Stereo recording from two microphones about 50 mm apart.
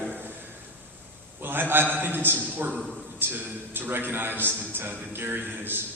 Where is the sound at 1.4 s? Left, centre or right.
Right.